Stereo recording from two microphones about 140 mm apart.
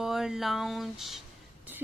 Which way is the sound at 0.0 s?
5° right (ahead or behind).